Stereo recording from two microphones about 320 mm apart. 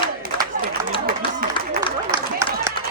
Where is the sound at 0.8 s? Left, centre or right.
Right.